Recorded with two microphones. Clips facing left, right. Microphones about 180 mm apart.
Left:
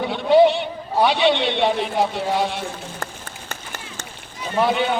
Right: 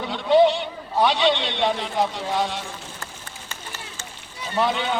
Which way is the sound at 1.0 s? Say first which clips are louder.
Left 3 dB; 15° left (ahead or behind).